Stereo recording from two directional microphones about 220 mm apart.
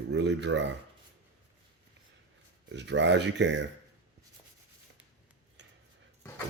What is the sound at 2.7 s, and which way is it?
Speech, 55° right (ahead or behind).